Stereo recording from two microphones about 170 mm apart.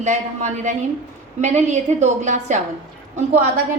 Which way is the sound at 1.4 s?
45° right (ahead or behind).